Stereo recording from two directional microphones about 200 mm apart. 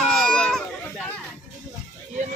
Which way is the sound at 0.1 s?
5° left (ahead or behind).